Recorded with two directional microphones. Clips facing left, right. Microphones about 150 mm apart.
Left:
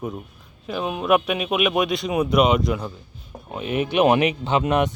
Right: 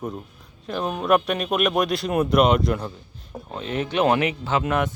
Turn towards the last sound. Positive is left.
turn(degrees=20)  # may be behind; listen again after turning